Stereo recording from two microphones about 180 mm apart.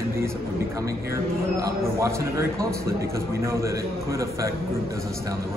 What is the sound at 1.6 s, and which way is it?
A man's voice, 15° right (ahead or behind).